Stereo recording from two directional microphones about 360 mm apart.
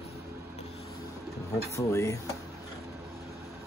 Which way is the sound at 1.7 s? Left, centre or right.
Centre.